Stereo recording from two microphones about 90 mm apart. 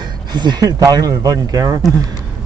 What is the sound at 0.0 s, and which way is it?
Speech, 55° right (ahead or behind).